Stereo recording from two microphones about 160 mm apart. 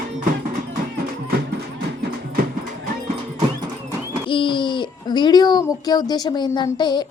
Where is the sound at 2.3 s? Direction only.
65° right (ahead or behind).